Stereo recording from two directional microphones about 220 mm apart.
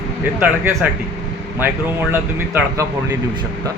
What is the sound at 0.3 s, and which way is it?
Speech, 5° right (ahead or behind).